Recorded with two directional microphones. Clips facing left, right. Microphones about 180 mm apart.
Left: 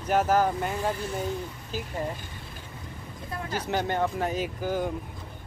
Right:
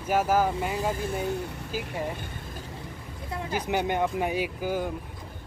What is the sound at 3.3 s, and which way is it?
Speech, 10° right (ahead or behind).